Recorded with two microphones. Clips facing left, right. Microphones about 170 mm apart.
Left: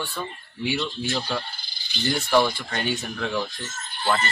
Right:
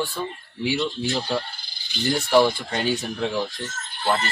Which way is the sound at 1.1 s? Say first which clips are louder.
Right 2 dB; 15° right (ahead or behind).